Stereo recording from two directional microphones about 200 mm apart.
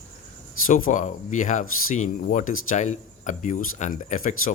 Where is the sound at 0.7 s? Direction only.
40° left (ahead or behind).